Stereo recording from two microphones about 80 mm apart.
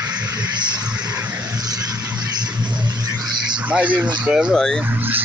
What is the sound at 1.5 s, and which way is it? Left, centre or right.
Vehicle, right.